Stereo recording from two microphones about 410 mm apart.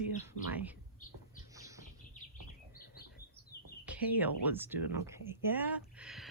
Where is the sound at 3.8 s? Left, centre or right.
Centre.